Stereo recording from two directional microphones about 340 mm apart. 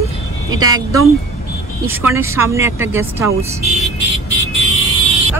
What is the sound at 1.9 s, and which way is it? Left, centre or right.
Speech, centre.